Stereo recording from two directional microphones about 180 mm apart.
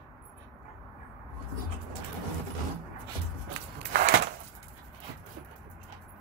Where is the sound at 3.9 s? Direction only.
45° right (ahead or behind).